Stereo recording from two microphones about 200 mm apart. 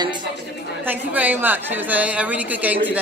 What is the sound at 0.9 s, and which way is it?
A woman's voice, 10° right (ahead or behind).